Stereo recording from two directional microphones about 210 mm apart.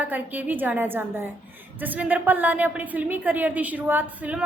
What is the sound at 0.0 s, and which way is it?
A woman's voice, 10° right (ahead or behind).